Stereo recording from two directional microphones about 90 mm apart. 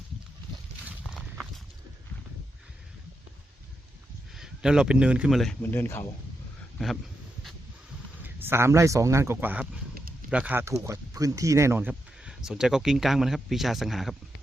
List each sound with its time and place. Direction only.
1.1 s clip-clop: centre (ahead or behind)
4.4 s speech: 5° right (ahead or behind)
5.3 s speech: 5° left (ahead or behind)
5.7 s speech: 25° left (ahead or behind)
6.7 s speech: 5° left (ahead or behind)
8.2 s speech: 25° right (ahead or behind)
10.5 s speech: 30° right (ahead or behind)
12.2 s speech: 5° right (ahead or behind)